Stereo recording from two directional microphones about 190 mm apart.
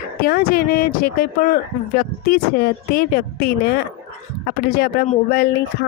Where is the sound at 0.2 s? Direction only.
50° left (ahead or behind).